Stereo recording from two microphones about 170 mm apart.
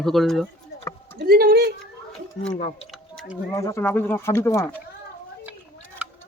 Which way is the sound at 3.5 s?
15° left (ahead or behind).